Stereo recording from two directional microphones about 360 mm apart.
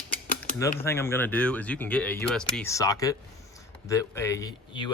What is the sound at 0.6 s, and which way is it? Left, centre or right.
Speech, centre.